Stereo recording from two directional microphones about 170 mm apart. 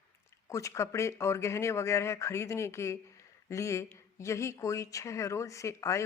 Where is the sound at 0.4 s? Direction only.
20° left (ahead or behind).